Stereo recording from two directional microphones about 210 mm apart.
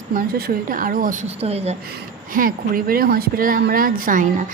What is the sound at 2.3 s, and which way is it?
Speech, 45° right (ahead or behind).